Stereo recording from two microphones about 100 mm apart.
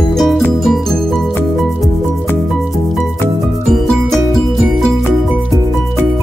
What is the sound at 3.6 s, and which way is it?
Music, centre (ahead or behind).